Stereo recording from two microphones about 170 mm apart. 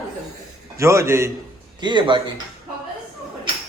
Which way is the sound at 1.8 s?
25° right (ahead or behind).